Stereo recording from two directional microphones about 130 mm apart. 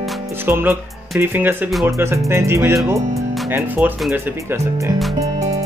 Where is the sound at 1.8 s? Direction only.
20° right (ahead or behind).